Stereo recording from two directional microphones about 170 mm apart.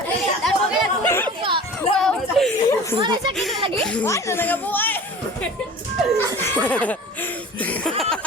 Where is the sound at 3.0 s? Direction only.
30° right (ahead or behind).